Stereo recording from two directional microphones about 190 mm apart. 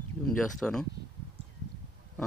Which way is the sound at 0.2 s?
5° left (ahead or behind).